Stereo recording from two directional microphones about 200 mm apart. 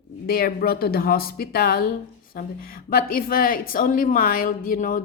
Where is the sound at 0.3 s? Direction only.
50° left (ahead or behind).